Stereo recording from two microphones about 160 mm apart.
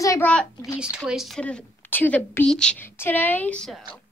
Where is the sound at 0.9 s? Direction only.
5° right (ahead or behind).